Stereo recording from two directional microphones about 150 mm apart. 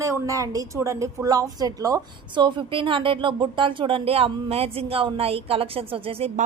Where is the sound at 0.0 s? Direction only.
20° right (ahead or behind); by 6.3 s 40° right (ahead or behind).